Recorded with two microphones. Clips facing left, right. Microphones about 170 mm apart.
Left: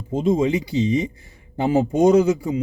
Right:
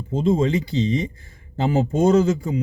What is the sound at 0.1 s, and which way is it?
Speech, 15° left (ahead or behind).